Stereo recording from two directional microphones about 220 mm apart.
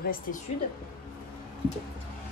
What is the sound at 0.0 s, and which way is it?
Speech, 40° left (ahead or behind).